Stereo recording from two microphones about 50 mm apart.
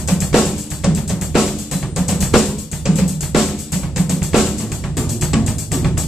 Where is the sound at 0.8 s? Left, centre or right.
Centre.